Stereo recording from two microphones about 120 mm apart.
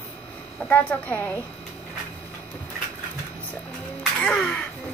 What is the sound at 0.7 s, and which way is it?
Speech, 15° left (ahead or behind).